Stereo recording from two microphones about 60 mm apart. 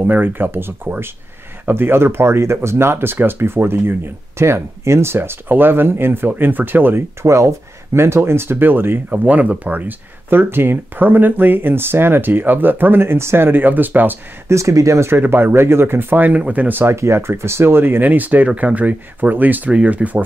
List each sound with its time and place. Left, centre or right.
0.0 s speech: right
7.2 s speech: right
9.1 s speech: right
14.5 s speech: right
15.1 s speech: right
16.9 s speech: right